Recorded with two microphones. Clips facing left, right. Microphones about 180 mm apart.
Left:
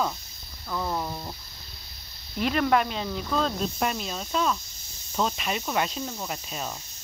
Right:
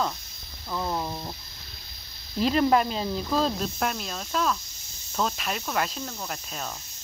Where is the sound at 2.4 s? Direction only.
30° right (ahead or behind).